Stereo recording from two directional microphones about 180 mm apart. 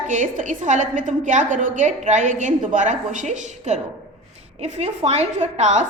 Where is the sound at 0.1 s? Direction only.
45° right (ahead or behind).